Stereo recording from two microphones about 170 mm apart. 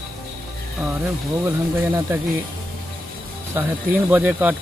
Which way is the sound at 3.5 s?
10° right (ahead or behind).